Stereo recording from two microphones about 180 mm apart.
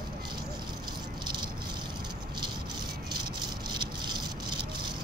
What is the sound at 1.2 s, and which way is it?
Rattle, 25° right (ahead or behind).